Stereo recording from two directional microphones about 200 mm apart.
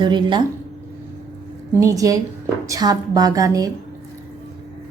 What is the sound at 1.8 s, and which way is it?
A woman's voice, 15° right (ahead or behind).